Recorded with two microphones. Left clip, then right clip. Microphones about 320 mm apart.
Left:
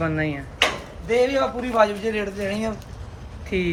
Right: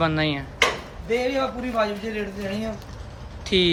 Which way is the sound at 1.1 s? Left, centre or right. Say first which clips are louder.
Left 4 dB; centre.